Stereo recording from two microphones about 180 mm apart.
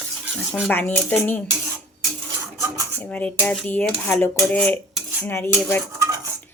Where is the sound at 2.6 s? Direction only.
15° right (ahead or behind).